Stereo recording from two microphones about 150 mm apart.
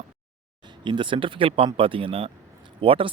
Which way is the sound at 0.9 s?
35° right (ahead or behind).